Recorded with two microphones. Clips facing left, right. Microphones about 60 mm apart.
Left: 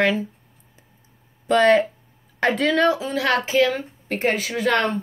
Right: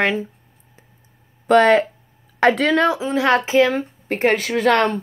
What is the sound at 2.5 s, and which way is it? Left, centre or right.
Speech, right.